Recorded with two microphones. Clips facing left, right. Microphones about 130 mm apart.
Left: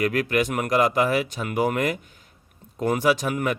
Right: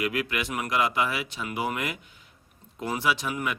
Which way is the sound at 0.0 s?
45° left (ahead or behind).